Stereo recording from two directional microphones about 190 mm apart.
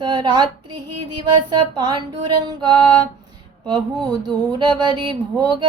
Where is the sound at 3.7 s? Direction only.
25° right (ahead or behind).